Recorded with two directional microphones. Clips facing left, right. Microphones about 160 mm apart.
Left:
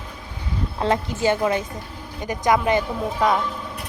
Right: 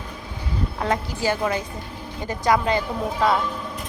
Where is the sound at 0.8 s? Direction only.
20° left (ahead or behind).